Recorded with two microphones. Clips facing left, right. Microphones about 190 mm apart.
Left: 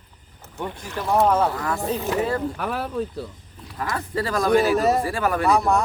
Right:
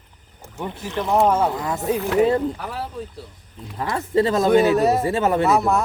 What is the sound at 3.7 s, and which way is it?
Speech, 25° right (ahead or behind).